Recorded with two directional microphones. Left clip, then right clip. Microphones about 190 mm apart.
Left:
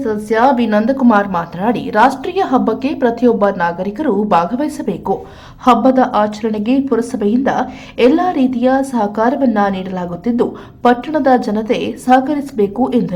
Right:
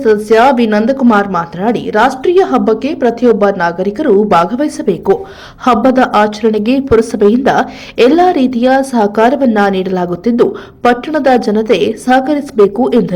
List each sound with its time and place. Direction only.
0.0 s a woman's voice: 20° right (ahead or behind)